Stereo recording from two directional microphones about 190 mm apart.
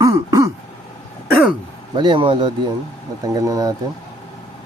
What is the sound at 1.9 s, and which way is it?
Speech, 25° right (ahead or behind).